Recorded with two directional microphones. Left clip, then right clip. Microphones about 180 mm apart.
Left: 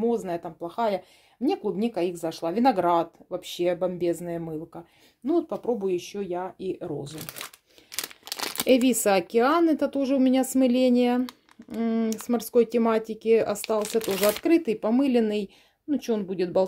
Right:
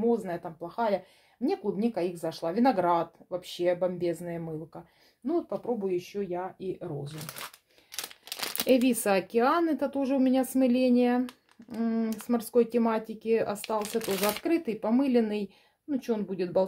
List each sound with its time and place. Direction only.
0.0 s speech: 35° left (ahead or behind)
13.7 s speech: 20° left (ahead or behind)
14.2 s speech: 30° left (ahead or behind)